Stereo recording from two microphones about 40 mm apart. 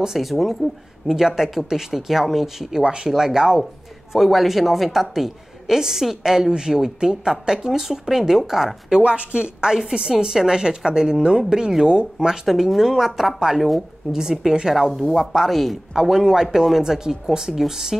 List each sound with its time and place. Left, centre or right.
0.0 s a woman's voice: centre
2.8 s a woman's voice: right
3.1 s a woman's voice: centre
9.0 s a woman's voice: right
12.4 s a woman's voice: centre
14.8 s speech: centre
16.0 s a woman's voice: centre